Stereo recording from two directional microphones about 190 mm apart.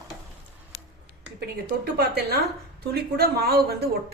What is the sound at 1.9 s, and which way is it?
A woman's voice, 55° right (ahead or behind).